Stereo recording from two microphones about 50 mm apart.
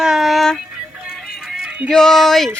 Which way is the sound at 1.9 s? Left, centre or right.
Centre.